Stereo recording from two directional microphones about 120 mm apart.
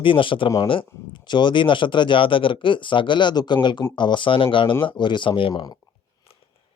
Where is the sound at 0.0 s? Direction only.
45° left (ahead or behind).